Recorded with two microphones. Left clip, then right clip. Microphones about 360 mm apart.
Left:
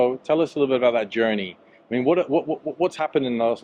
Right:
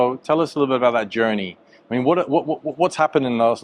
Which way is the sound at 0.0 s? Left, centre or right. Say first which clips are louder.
Right 2 dB; right.